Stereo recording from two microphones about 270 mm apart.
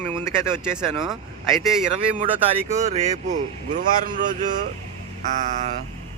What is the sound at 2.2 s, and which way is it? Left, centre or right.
A man's voice, right.